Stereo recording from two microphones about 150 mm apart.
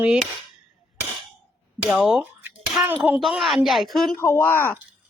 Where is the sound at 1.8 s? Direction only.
5° right (ahead or behind).